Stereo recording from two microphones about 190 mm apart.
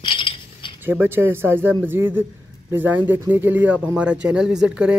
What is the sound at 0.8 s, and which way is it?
A man's voice, 10° right (ahead or behind).